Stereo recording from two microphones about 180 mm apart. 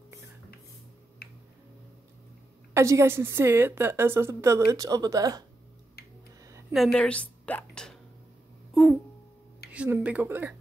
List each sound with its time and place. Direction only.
1.2 s finger snapping: 60° left (ahead or behind)
2.7 s a woman's voice: 15° right (ahead or behind)
6.7 s a woman's voice: centre (ahead or behind)
9.7 s a woman's voice: 10° right (ahead or behind)